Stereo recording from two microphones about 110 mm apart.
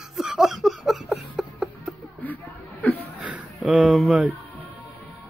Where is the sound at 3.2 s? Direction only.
10° right (ahead or behind).